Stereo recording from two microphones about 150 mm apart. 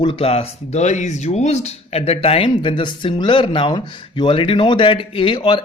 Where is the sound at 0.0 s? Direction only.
35° left (ahead or behind).